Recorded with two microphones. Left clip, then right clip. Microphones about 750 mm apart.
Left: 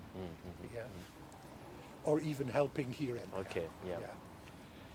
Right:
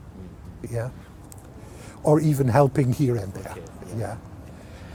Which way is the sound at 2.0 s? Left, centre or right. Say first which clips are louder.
Right 14 dB; right.